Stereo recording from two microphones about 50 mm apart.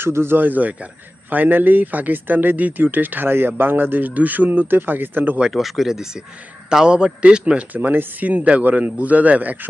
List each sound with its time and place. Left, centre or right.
0.0 s speech: right
0.3 s speech: right
5.5 s a man's voice: centre; by 7.6 s right
7.7 s speech: right